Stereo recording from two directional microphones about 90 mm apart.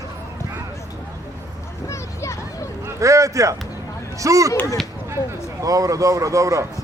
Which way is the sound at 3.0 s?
35° right (ahead or behind).